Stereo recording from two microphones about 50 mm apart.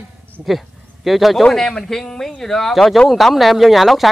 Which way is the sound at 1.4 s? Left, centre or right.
Centre.